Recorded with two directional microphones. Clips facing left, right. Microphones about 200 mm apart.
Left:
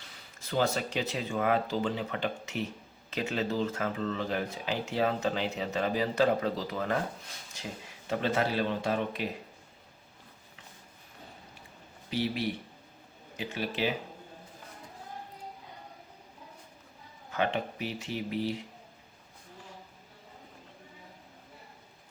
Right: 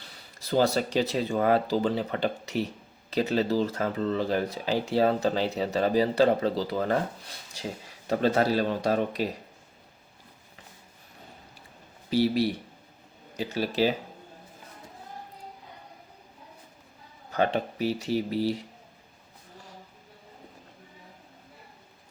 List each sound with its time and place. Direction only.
0.3 s speech: 35° right (ahead or behind)
12.1 s speech: 35° right (ahead or behind)
17.3 s speech: 40° right (ahead or behind)